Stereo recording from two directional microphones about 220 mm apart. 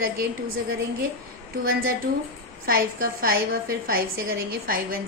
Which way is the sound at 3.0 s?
45° right (ahead or behind).